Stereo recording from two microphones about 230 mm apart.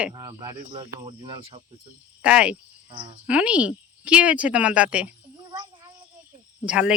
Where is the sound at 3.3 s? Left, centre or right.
Centre.